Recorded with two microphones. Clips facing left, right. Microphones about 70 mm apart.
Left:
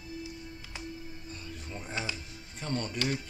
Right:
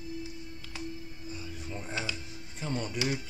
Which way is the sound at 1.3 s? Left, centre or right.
Centre.